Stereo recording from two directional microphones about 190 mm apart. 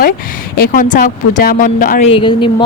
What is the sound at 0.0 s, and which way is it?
Speech, 45° left (ahead or behind).